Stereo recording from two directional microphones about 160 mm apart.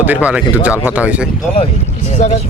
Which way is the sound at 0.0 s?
10° right (ahead or behind).